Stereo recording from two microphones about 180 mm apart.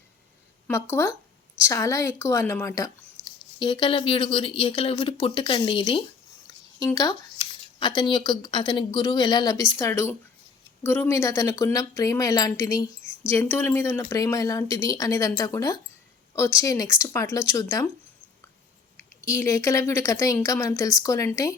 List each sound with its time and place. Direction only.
0.7 s speech: 15° left (ahead or behind)
19.2 s speech: 15° left (ahead or behind)